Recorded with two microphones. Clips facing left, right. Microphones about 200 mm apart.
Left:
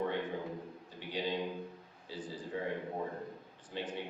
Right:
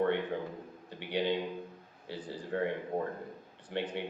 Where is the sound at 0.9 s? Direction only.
65° right (ahead or behind).